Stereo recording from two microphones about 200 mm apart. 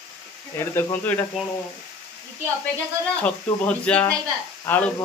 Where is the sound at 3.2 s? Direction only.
5° left (ahead or behind).